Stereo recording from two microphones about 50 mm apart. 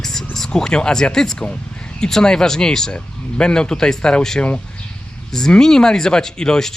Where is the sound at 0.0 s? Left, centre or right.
Centre.